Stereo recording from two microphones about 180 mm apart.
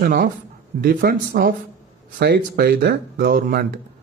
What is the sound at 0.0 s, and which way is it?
A man's voice, 50° right (ahead or behind).